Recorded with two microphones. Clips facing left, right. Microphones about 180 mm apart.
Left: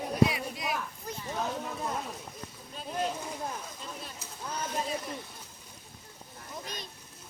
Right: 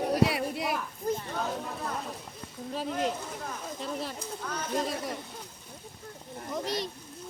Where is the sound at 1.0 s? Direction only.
50° right (ahead or behind).